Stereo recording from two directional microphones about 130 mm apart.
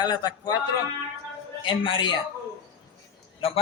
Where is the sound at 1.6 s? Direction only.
40° left (ahead or behind).